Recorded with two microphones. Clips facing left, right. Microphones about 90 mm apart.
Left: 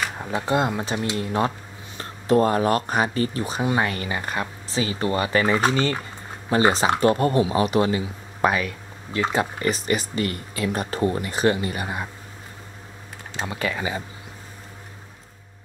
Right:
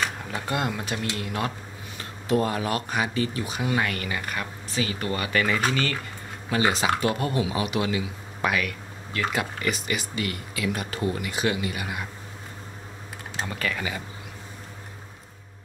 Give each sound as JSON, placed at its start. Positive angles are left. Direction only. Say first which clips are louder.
{"t": 0.2, "sound": "speech", "louder": "left 6 dB", "side_deg": 25}
{"t": 13.5, "sound": "speech", "louder": "left 4 dB", "side_deg": 20}